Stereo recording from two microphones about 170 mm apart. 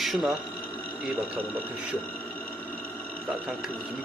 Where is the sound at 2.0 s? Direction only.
10° left (ahead or behind).